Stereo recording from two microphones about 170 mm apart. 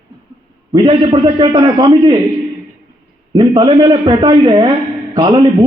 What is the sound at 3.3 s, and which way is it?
A man's voice, 25° right (ahead or behind).